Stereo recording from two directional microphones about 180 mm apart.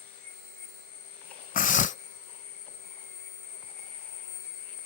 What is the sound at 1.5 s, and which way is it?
Dog, 45° left (ahead or behind).